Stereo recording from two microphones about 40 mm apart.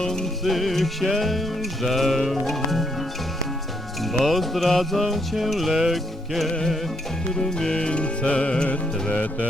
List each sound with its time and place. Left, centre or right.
0.0 s music: centre
0.4 s music: centre
4.0 s music: centre
7.3 s music: centre; by 9.5 s left